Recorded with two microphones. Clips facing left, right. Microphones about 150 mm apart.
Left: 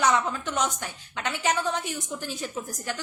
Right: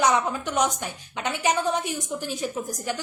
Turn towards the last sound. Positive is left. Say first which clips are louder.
# right 4 dB
turn(degrees=-15)  # may be behind; listen again after turning